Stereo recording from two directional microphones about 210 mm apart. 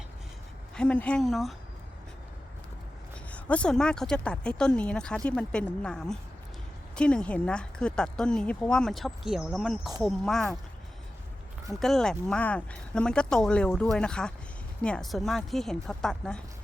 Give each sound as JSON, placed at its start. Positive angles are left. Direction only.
{"t": 0.8, "sound": "speech", "side_deg": 5}
{"t": 3.3, "sound": "speech", "side_deg": 5}
{"t": 11.7, "sound": "speech", "side_deg": 0}